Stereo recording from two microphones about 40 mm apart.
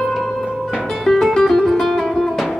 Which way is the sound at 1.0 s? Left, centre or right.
Centre.